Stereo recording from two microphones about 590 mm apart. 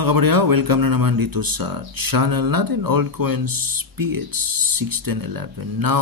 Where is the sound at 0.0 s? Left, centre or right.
Right.